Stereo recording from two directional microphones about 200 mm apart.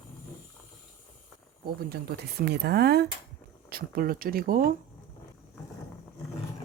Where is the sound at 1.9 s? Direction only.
55° right (ahead or behind).